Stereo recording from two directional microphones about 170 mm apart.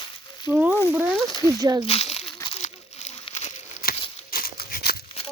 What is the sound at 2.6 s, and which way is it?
Crumpling, 40° left (ahead or behind).